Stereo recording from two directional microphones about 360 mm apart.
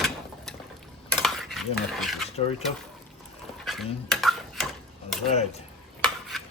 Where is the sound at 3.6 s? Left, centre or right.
Centre.